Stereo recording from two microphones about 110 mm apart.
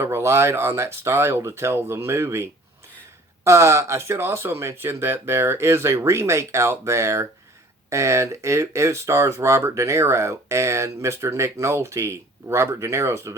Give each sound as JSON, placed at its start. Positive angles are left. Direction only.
{"t": 0.0, "sound": "speech", "side_deg": -25}